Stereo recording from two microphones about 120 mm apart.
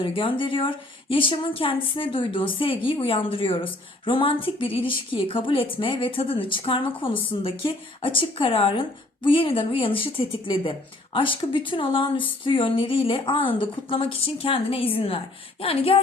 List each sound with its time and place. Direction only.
0.0 s a woman's voice: 45° left (ahead or behind)